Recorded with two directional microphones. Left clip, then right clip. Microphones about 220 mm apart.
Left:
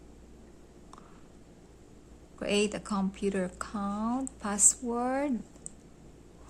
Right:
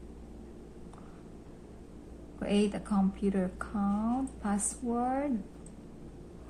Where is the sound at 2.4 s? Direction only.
45° left (ahead or behind).